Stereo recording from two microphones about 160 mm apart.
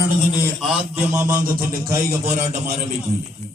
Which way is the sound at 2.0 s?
45° right (ahead or behind).